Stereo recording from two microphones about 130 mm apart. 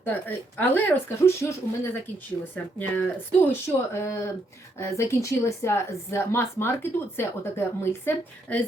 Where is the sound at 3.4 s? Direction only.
20° left (ahead or behind).